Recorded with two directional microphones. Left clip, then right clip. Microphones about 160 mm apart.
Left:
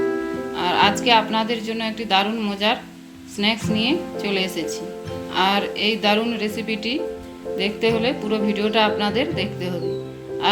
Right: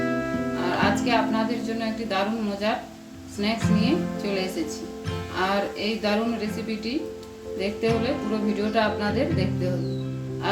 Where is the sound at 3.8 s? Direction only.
45° left (ahead or behind).